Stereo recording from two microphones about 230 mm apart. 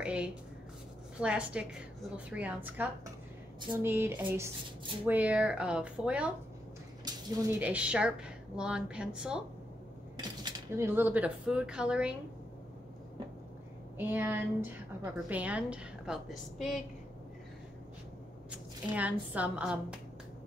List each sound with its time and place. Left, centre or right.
0.0 s a woman's voice: centre
7.1 s dishes: centre
7.6 s a woman's voice: centre
10.1 s speech: centre
13.9 s a woman's voice: centre
18.5 s speech: centre